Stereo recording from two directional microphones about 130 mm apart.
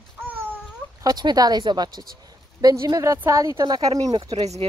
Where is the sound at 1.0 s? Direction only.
30° right (ahead or behind).